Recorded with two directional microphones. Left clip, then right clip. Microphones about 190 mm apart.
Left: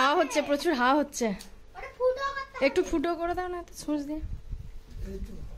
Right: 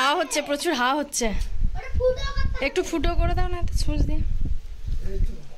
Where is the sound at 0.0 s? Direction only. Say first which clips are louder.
Right 2 dB; 10° left (ahead or behind).